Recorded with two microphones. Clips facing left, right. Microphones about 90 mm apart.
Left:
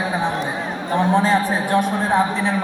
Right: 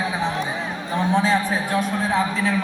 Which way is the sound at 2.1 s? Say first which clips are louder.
Left 3 dB; 20° left (ahead or behind).